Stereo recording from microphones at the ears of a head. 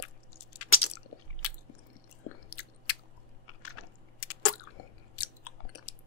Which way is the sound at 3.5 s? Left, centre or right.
Left.